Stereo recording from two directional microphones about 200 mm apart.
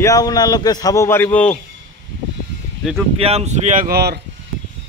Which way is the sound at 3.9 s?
55° right (ahead or behind).